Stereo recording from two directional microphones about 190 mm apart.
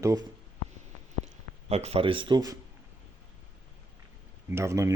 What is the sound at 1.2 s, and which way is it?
Speech, 35° right (ahead or behind).